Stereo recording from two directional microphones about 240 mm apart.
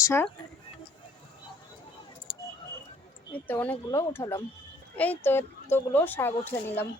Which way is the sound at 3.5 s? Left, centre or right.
Centre.